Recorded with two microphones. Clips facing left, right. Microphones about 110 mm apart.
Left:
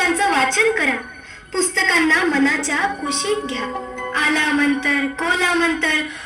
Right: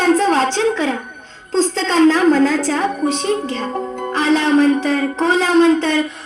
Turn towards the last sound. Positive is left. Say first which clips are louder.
# right 7 dB
turn(degrees=-35)  # may be behind; listen again after turning